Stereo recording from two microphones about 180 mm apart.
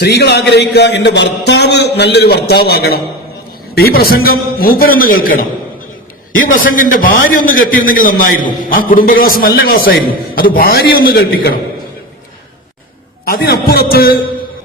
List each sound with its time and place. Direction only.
0.0 s a man's voice: 65° left (ahead or behind)
13.2 s a man's voice: 60° left (ahead or behind)